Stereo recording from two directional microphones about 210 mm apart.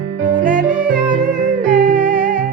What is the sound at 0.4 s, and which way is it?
Yodeling, 40° right (ahead or behind).